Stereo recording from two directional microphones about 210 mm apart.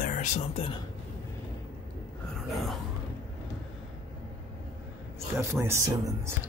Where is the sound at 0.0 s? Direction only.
35° left (ahead or behind).